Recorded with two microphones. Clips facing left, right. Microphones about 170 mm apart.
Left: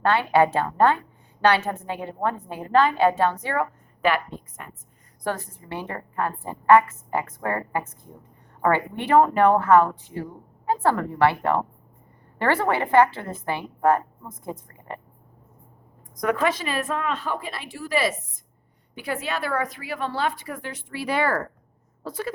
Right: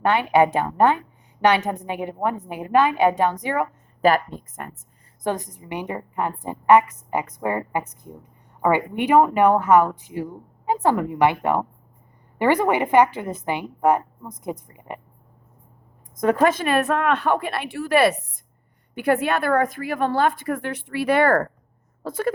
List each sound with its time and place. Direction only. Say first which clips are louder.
0.0 s a woman's voice: right 2 dB; 20° right (ahead or behind)
4.0 s a woman's voice: right 5 dB; 45° right (ahead or behind)
5.2 s a woman's voice: right 3 dB; 20° right (ahead or behind)
16.2 s a woman's voice: right 5 dB; 40° right (ahead or behind)